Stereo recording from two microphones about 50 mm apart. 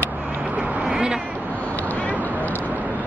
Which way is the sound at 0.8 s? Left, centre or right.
Centre.